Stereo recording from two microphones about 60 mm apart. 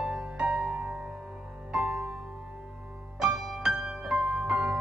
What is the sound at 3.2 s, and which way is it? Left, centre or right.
Music, centre.